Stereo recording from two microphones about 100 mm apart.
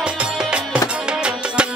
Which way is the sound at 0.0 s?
10° right (ahead or behind).